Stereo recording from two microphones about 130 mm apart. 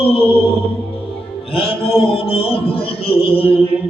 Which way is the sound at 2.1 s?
45° left (ahead or behind).